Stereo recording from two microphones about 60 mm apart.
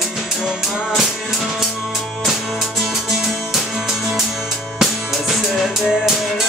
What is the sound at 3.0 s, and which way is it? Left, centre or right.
Music, centre.